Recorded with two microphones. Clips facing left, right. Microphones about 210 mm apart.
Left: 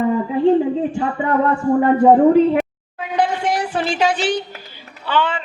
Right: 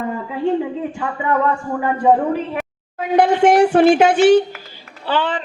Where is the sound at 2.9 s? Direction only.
50° right (ahead or behind).